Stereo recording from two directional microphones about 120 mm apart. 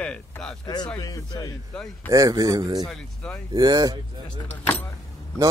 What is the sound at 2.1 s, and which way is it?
Speech, 30° right (ahead or behind).